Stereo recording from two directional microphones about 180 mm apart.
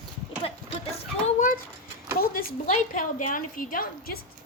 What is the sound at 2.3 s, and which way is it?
A woman's voice, 45° left (ahead or behind).